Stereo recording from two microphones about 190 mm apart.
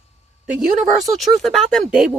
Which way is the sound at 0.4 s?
5° right (ahead or behind).